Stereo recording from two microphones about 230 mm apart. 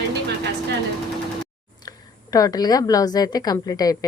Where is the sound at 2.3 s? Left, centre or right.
Centre.